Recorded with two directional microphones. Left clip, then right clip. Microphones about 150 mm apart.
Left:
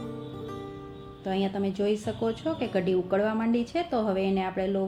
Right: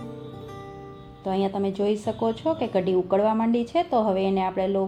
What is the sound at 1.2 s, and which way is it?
Speech, 25° right (ahead or behind).